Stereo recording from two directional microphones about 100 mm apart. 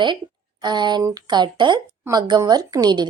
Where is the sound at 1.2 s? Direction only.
50° right (ahead or behind).